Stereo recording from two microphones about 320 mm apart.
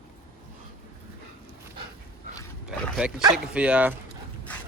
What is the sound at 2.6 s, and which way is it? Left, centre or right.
Speech, centre.